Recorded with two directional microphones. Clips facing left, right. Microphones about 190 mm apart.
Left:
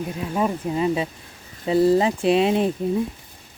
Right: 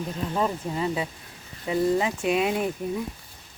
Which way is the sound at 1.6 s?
30° left (ahead or behind).